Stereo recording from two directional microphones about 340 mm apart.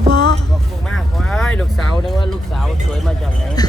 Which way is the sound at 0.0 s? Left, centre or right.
Right.